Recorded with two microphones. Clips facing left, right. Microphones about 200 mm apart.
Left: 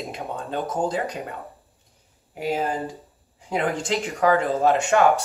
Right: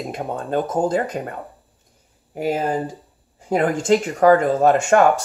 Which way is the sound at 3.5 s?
45° right (ahead or behind).